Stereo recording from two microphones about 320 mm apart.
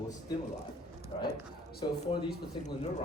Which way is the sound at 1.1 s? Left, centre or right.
Centre.